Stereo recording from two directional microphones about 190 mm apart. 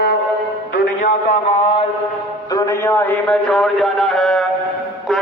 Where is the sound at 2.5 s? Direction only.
20° left (ahead or behind); by 4.4 s centre (ahead or behind).